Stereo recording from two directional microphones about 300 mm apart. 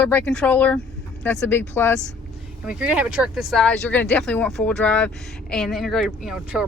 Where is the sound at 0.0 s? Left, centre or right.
Centre.